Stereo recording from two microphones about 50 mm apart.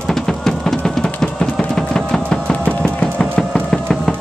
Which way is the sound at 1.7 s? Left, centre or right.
Centre.